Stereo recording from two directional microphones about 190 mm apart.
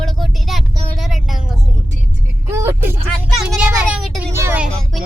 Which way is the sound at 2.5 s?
15° right (ahead or behind).